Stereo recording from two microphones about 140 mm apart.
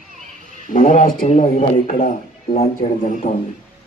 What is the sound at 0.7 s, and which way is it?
A man's voice, 65° left (ahead or behind).